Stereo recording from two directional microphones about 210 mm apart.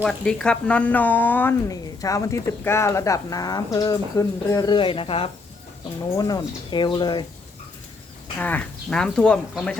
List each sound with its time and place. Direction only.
0.0 s speech: centre (ahead or behind); by 7.3 s 20° left (ahead or behind)
8.4 s speech: 5° left (ahead or behind)